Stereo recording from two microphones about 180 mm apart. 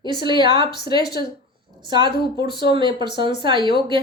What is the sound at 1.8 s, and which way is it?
Speech, 25° right (ahead or behind).